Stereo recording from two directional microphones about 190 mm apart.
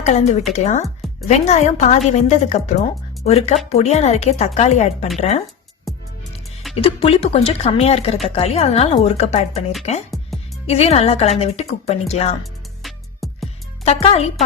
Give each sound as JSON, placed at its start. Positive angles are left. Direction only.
{"t": 0.0, "sound": "a woman's voice", "side_deg": 35}
{"t": 5.9, "sound": "music", "side_deg": 0}
{"t": 6.7, "sound": "a woman's voice", "side_deg": 30}
{"t": 10.7, "sound": "a woman's voice", "side_deg": 35}
{"t": 12.4, "sound": "music", "side_deg": 0}
{"t": 13.8, "sound": "a woman's voice", "side_deg": 30}